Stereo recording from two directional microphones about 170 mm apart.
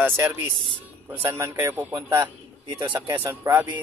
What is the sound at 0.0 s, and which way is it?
Speech, 10° right (ahead or behind).